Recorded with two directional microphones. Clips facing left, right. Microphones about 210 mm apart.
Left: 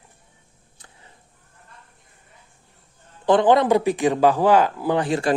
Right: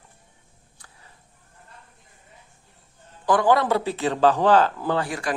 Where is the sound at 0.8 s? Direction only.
25° left (ahead or behind).